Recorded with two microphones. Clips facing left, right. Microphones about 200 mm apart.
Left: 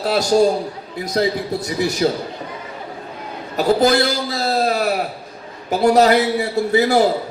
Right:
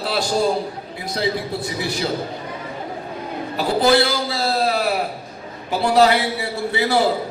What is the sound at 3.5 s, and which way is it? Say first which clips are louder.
A man's voice: left 2 dB; 45° left (ahead or behind).